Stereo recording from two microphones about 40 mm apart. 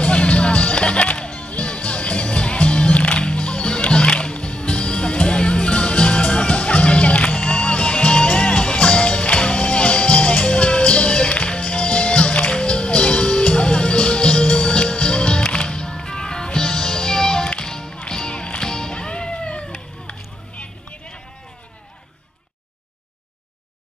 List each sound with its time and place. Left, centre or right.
0.0 s music: left